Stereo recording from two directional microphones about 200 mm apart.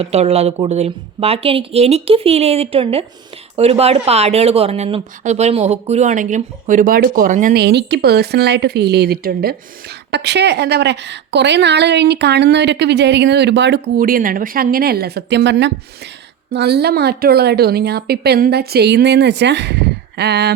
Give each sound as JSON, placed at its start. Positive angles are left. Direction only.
{"t": 0.0, "sound": "a woman's voice", "side_deg": -30}